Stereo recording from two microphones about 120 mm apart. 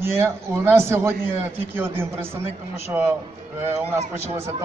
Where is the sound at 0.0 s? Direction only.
20° right (ahead or behind).